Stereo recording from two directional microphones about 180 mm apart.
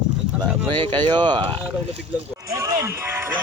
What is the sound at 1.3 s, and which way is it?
Speech, 25° right (ahead or behind).